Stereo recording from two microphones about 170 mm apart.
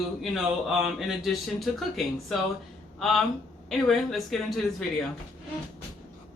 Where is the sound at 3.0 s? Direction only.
Centre (ahead or behind).